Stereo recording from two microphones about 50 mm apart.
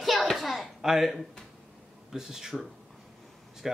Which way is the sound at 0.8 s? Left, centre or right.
Centre.